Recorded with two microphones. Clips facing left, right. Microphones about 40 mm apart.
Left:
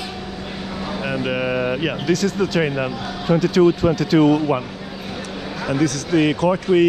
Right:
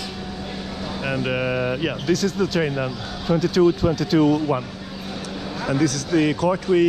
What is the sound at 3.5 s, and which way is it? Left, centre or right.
Speech, left.